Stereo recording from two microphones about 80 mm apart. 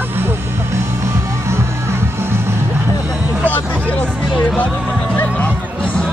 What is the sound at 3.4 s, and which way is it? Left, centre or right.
Speech, left.